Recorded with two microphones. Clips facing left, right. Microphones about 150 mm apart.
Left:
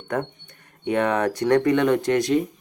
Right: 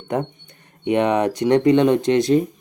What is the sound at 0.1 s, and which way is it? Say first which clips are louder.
Speech: right 3 dB; 20° right (ahead or behind).